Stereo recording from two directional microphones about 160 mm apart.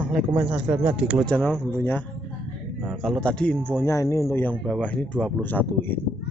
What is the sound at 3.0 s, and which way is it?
Speech, 5° left (ahead or behind).